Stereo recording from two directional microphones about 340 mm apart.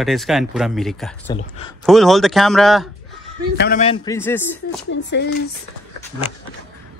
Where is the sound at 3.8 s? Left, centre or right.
Centre.